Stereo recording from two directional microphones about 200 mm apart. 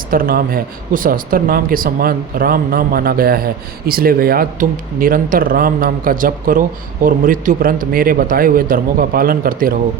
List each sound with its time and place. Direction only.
0.1 s speech: 45° right (ahead or behind)